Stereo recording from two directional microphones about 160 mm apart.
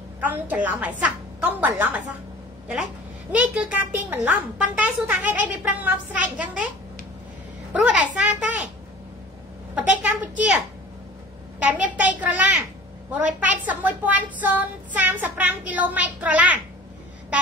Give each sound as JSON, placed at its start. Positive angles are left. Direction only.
{"t": 0.2, "sound": "speech", "side_deg": -10}
{"t": 7.7, "sound": "a child's voice", "side_deg": -5}
{"t": 9.8, "sound": "speech", "side_deg": -10}
{"t": 11.6, "sound": "speech", "side_deg": -10}